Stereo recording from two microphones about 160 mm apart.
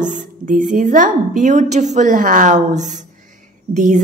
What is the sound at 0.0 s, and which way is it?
A woman's voice, 50° right (ahead or behind).